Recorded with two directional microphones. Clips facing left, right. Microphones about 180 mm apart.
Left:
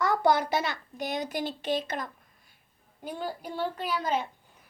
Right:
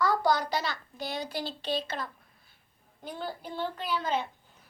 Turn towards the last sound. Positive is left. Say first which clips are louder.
# left 1 dB
turn(degrees=10)  # may be behind; listen again after turning